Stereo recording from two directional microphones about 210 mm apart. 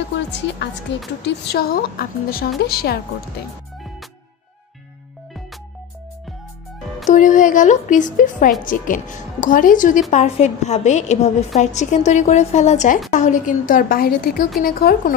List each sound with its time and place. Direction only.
0.9 s a woman's voice: 55° left (ahead or behind)
7.1 s a woman's voice: 35° left (ahead or behind)